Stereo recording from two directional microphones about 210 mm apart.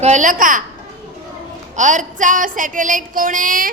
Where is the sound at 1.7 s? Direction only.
35° right (ahead or behind).